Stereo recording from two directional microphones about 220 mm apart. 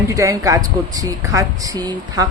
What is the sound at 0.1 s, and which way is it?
A woman's voice, 15° right (ahead or behind).